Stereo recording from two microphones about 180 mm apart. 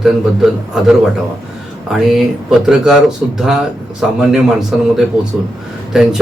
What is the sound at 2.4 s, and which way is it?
Speech, 5° right (ahead or behind).